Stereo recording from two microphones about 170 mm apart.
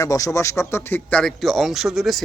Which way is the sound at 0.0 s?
20° left (ahead or behind).